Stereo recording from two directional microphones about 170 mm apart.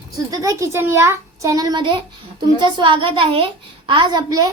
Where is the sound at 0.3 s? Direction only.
20° right (ahead or behind).